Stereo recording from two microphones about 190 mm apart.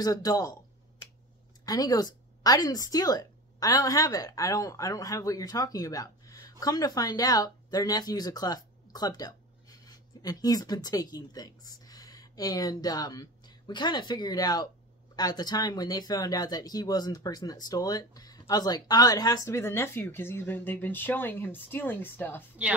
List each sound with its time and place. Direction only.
0.0 s speech: 20° left (ahead or behind)
1.7 s speech: 20° left (ahead or behind)
22.6 s a woman's voice: 5° right (ahead or behind)